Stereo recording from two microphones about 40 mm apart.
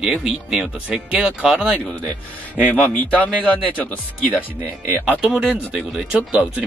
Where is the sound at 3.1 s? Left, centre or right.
Left.